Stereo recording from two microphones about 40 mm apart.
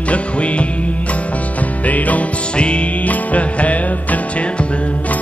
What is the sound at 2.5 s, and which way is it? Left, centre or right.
Music, left.